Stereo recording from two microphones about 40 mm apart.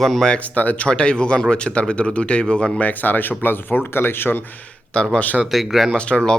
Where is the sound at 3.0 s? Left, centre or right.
Left.